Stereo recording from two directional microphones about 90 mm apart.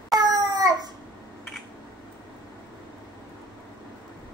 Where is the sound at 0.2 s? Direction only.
50° right (ahead or behind).